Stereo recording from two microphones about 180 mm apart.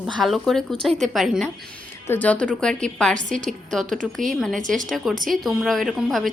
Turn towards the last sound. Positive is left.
turn(degrees=0)  # may be behind; listen again after turning